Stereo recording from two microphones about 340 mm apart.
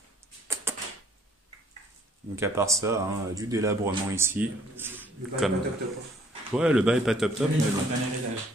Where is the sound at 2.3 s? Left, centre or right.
Centre.